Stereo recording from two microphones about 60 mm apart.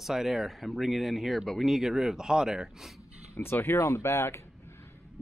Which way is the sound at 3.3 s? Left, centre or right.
Left.